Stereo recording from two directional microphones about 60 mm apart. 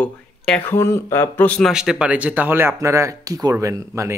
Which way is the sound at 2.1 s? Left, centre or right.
Right.